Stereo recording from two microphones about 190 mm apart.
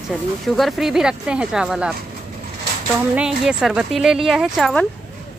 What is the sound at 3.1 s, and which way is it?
Speech, 5° right (ahead or behind).